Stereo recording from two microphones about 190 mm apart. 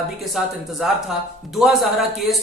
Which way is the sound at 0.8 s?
5° right (ahead or behind).